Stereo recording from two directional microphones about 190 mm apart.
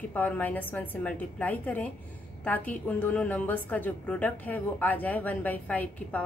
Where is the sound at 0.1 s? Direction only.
10° left (ahead or behind).